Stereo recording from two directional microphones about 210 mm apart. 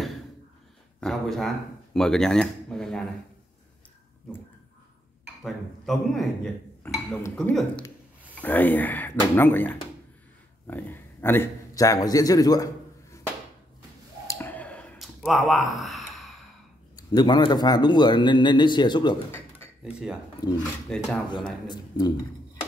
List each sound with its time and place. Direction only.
1.0 s speech: centre (ahead or behind)
5.4 s a man's voice: centre (ahead or behind); by 12.6 s 15° left (ahead or behind)
14.2 s clicking: 10° left (ahead or behind)
16.9 s speech: 20° left (ahead or behind)
19.8 s speech: 5° right (ahead or behind)
20.4 s speech: 20° left (ahead or behind)
20.9 s speech: centre (ahead or behind)
21.6 s speech: 15° left (ahead or behind)